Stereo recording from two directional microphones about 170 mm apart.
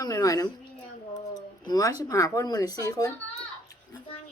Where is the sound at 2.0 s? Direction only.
20° left (ahead or behind).